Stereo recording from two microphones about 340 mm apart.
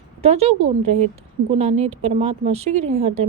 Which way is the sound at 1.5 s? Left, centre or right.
Centre.